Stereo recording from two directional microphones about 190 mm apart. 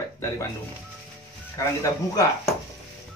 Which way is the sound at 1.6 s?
15° left (ahead or behind).